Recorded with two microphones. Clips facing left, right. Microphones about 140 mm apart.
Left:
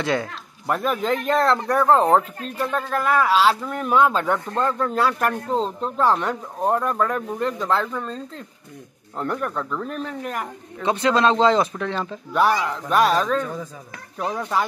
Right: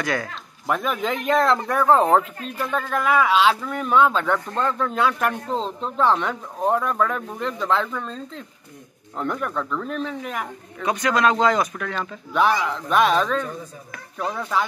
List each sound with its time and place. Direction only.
0.0 s speech: 25° left (ahead or behind)
0.7 s speech: centre (ahead or behind)
10.8 s speech: 25° left (ahead or behind)
12.3 s speech: 5° left (ahead or behind)